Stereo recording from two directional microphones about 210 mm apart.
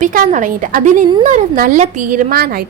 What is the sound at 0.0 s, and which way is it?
A woman's voice, 40° right (ahead or behind).